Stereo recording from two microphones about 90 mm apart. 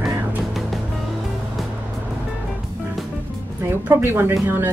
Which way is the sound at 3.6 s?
25° right (ahead or behind).